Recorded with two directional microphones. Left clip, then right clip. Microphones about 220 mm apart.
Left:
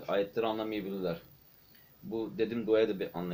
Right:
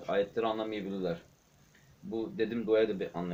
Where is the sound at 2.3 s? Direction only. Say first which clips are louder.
Even; 5° left (ahead or behind).